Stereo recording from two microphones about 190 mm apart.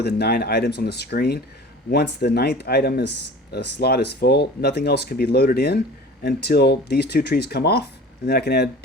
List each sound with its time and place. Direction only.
0.0 s speech: 55° left (ahead or behind)